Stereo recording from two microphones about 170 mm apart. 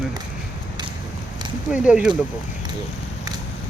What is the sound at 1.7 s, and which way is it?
Speech, 5° right (ahead or behind).